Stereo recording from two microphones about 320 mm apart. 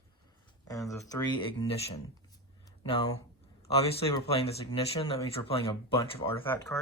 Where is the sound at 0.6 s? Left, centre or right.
Centre.